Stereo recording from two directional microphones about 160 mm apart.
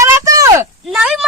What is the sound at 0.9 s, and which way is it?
Speech, 5° right (ahead or behind).